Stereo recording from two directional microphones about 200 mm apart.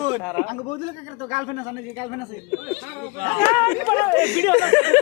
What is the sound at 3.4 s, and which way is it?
Speech, 20° left (ahead or behind).